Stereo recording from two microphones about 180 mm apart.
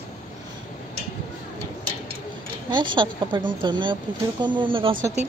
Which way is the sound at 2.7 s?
25° right (ahead or behind).